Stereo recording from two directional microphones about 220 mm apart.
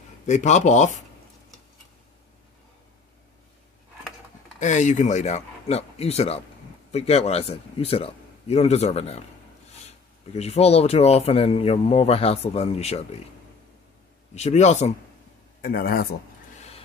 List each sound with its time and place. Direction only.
0.3 s speech: 30° left (ahead or behind)
4.6 s speech: 35° left (ahead or behind)
10.3 s speech: 30° left (ahead or behind)
14.3 s speech: 30° left (ahead or behind)
15.6 s speech: 40° left (ahead or behind)